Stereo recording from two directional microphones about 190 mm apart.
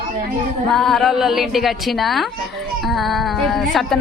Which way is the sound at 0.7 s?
Centre (ahead or behind).